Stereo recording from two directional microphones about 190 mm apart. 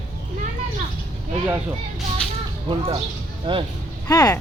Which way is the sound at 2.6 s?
25° right (ahead or behind).